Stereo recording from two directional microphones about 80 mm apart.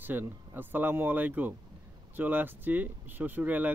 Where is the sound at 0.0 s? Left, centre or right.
Right.